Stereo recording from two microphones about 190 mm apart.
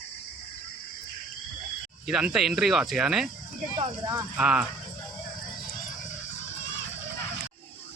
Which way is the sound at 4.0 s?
20° right (ahead or behind).